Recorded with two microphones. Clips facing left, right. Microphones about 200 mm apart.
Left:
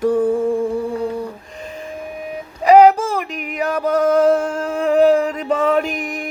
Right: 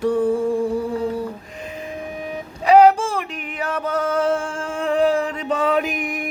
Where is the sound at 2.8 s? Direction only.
10° left (ahead or behind).